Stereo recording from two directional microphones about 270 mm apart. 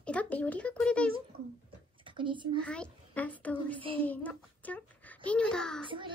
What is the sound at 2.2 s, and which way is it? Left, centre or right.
Speech, centre.